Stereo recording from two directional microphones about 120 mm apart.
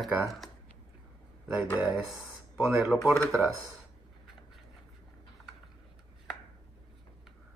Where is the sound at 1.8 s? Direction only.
5° right (ahead or behind).